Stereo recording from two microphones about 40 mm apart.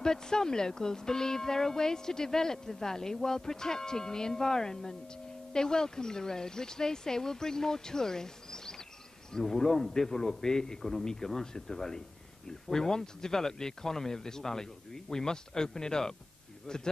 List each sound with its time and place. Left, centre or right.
0.0 s speech: centre